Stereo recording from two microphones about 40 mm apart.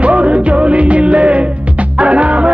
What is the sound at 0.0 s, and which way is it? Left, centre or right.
Music, right.